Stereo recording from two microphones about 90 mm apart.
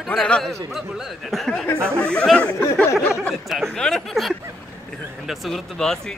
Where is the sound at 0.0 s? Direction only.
5° left (ahead or behind).